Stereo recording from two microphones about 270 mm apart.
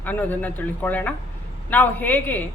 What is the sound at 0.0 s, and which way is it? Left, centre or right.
Speech, centre.